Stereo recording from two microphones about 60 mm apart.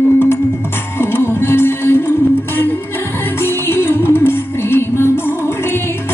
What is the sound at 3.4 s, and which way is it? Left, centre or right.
Music, left.